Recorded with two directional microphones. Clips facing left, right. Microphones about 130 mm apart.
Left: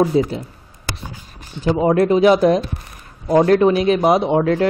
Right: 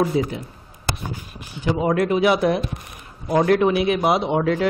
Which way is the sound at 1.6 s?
30° left (ahead or behind).